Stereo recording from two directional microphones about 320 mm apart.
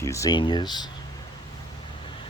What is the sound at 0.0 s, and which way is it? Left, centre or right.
Speech, centre.